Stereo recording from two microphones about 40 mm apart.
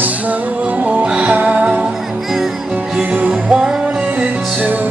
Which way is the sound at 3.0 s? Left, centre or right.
Right.